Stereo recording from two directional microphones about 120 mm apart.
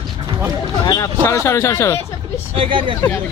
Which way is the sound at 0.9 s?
30° left (ahead or behind).